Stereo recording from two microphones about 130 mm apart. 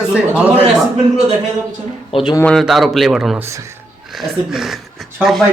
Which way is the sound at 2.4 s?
5° left (ahead or behind).